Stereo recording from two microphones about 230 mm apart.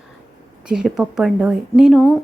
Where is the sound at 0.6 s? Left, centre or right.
Centre.